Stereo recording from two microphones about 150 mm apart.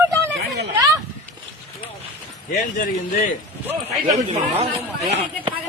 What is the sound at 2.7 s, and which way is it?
Speech, 60° left (ahead or behind).